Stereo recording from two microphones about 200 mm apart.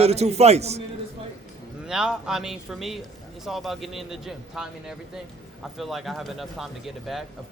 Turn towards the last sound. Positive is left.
turn(degrees=0)  # may be behind; listen again after turning